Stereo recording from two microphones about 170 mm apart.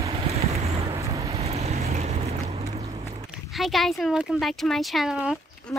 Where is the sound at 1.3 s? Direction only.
35° right (ahead or behind).